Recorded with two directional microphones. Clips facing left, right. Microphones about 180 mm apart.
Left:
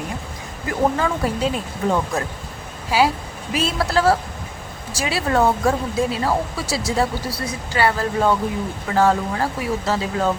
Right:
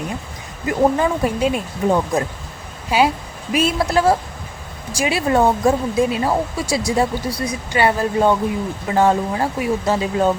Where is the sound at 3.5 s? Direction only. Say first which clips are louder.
Right 4 dB; 20° right (ahead or behind).